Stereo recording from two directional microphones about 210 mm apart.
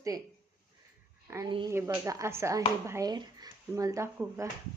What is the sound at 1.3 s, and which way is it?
Speech, 20° right (ahead or behind).